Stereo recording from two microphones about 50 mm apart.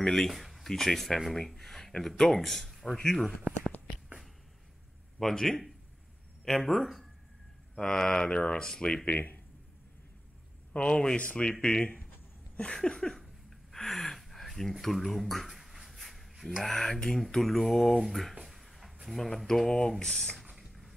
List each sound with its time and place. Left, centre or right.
0.0 s speech: centre
3.0 s speech: centre
5.2 s speech: centre
9.0 s speech: left
10.7 s speech: centre
13.7 s a sound: centre
16.6 s speech: centre
18.4 s a sound: centre
19.0 s speech: centre
20.5 s a sound: centre